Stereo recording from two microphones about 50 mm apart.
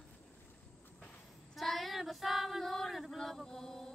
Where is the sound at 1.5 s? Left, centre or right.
Centre.